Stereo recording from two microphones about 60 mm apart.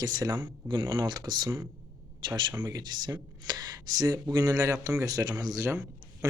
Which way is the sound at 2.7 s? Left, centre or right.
Right.